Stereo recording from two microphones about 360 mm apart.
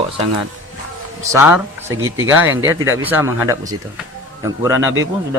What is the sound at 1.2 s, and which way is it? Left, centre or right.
Speech, centre.